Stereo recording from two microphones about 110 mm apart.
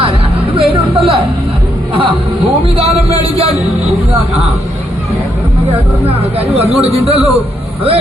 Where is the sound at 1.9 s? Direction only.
55° right (ahead or behind).